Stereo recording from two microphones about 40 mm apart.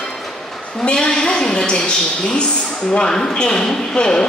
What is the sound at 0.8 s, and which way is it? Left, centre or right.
A woman's voice, left.